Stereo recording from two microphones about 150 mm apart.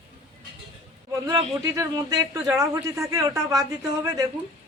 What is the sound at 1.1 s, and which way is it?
A man's voice, 20° right (ahead or behind).